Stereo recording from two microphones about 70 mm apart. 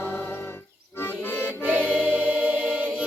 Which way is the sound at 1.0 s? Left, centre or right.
Left.